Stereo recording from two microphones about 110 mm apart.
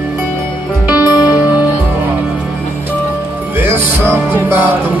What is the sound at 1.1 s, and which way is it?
Music, 35° left (ahead or behind).